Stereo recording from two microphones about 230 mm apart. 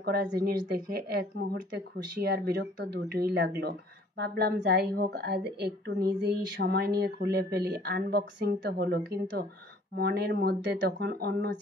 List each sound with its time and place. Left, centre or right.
0.0 s a woman's voice: right